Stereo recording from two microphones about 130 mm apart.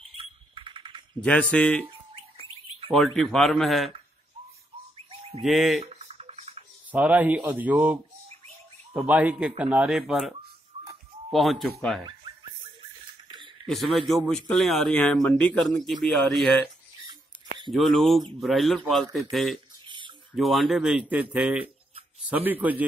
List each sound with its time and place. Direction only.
0.2 s a sound: 40° right (ahead or behind)
1.2 s speech: 10° left (ahead or behind)
3.1 s speech: centre (ahead or behind)
4.9 s bird: 45° right (ahead or behind)
5.4 s speech: centre (ahead or behind)
5.8 s a sound: 55° right (ahead or behind)
6.9 s speech: 10° right (ahead or behind)
9.0 s speech: 10° right (ahead or behind)
13.7 s speech: centre (ahead or behind)
17.6 s speech: centre (ahead or behind)